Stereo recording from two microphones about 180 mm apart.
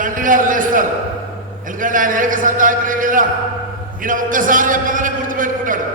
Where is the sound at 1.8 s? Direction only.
50° right (ahead or behind).